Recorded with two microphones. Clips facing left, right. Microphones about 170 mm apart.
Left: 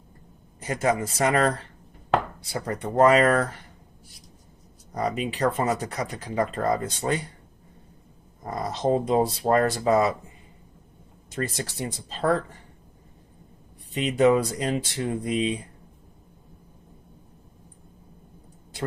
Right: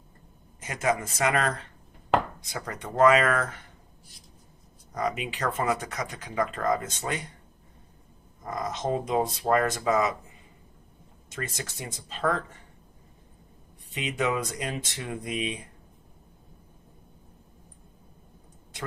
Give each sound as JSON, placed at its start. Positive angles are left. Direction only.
{"t": 0.6, "sound": "speech", "side_deg": 35}
{"t": 4.9, "sound": "speech", "side_deg": 35}
{"t": 8.4, "sound": "speech", "side_deg": 35}
{"t": 11.3, "sound": "speech", "side_deg": 30}
{"t": 13.9, "sound": "speech", "side_deg": 35}